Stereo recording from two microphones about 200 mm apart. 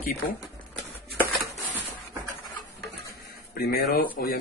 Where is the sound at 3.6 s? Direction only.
50° left (ahead or behind).